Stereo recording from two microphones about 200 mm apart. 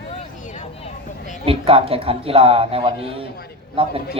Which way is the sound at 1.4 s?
30° right (ahead or behind).